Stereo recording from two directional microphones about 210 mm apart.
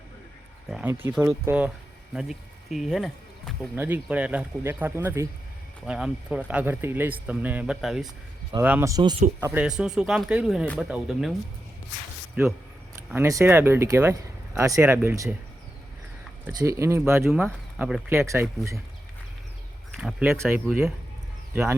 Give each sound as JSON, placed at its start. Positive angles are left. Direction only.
{"t": 0.7, "sound": "speech", "side_deg": -5}
{"t": 9.4, "sound": "speech", "side_deg": -5}
{"t": 12.4, "sound": "speech", "side_deg": -10}
{"t": 16.5, "sound": "speech", "side_deg": -15}
{"t": 19.9, "sound": "speech", "side_deg": 0}